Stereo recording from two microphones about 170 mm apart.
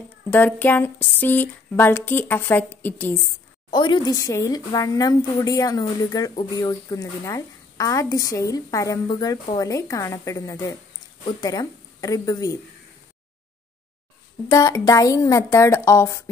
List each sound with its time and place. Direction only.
0.3 s speech: 10° left (ahead or behind)
3.7 s speech: 25° left (ahead or behind)
14.5 s speech: 20° left (ahead or behind)